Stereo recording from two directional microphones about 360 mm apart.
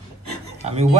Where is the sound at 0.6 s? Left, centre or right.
Centre.